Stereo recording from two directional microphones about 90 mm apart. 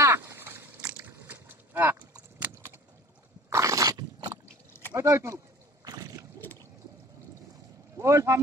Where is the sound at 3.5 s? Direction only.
35° right (ahead or behind).